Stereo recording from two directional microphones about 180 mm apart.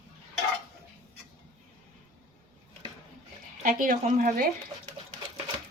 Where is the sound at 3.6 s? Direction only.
50° right (ahead or behind).